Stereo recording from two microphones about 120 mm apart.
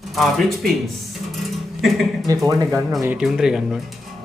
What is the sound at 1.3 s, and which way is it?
Music, centre (ahead or behind).